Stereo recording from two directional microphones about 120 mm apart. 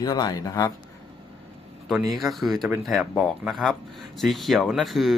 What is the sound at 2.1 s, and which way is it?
Speech, centre (ahead or behind).